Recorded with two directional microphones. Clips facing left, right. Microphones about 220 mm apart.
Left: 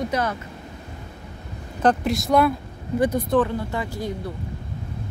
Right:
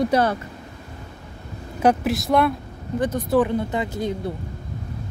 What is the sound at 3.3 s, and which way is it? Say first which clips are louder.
Speech: right 2 dB; 15° right (ahead or behind).